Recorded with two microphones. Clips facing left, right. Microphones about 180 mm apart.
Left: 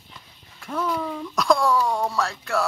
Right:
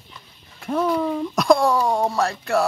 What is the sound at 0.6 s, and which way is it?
Speech, 30° right (ahead or behind).